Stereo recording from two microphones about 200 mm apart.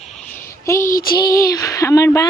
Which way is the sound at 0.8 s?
45° left (ahead or behind).